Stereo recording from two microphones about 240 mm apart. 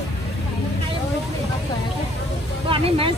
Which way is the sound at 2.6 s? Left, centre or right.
Right.